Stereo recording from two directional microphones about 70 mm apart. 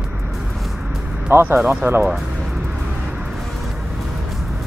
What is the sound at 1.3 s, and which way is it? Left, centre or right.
Speech, right.